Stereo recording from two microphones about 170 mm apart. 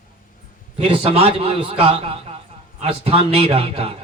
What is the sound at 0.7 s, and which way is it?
A man's voice, 35° right (ahead or behind).